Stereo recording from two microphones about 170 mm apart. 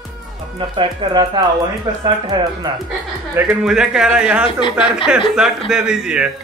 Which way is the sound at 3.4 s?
5° right (ahead or behind).